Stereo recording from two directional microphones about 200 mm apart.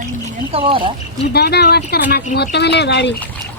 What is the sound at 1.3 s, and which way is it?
Speech, 55° left (ahead or behind).